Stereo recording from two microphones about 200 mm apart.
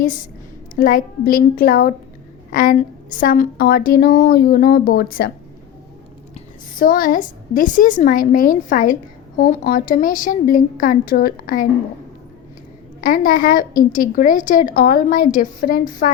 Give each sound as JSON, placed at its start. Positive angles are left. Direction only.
{"t": 0.8, "sound": "a woman's voice", "side_deg": 45}
{"t": 6.7, "sound": "a woman's voice", "side_deg": 45}
{"t": 13.0, "sound": "a woman's voice", "side_deg": 45}